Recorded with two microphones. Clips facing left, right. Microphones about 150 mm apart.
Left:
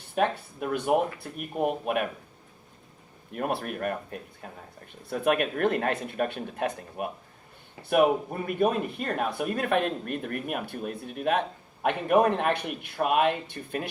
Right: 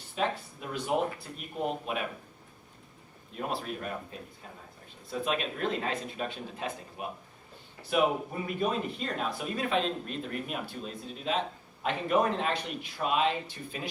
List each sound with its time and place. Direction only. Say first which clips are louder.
0.2 s speech: left 5 dB; 55° left (ahead or behind)
3.3 s speech: left 5 dB; 60° left (ahead or behind)